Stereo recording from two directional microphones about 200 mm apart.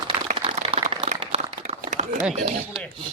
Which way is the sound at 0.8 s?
30° right (ahead or behind).